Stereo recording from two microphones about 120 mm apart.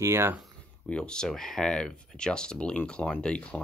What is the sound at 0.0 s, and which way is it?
Speech, 20° right (ahead or behind).